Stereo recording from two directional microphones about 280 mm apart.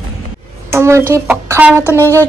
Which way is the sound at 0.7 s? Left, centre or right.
Centre.